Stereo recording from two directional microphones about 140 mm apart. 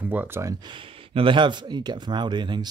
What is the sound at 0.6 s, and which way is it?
Speech, 40° right (ahead or behind).